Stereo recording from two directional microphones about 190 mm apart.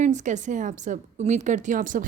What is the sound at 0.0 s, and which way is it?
A woman's voice, 40° right (ahead or behind).